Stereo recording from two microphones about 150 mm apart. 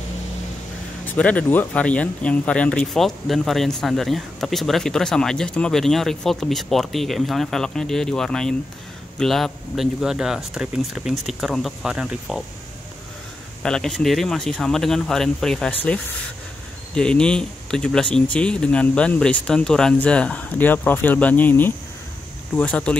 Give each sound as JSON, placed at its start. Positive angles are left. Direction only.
{"t": 1.0, "sound": "speech", "side_deg": 10}
{"t": 13.6, "sound": "speech", "side_deg": 5}